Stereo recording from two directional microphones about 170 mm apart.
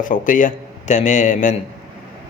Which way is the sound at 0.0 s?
50° left (ahead or behind).